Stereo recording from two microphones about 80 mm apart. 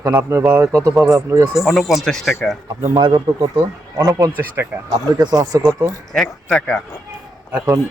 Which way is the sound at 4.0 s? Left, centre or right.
Right.